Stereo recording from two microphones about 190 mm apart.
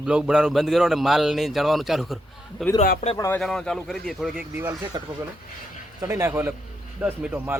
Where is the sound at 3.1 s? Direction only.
15° left (ahead or behind).